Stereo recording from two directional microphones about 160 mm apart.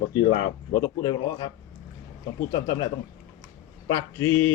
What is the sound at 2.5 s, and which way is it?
Speech, 25° left (ahead or behind).